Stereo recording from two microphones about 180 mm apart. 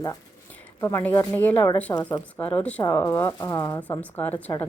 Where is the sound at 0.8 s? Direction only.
15° left (ahead or behind).